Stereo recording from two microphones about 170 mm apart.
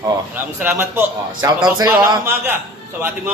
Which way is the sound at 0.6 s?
15° right (ahead or behind).